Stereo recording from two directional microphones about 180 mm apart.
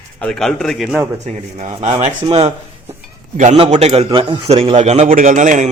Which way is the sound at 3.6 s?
35° right (ahead or behind).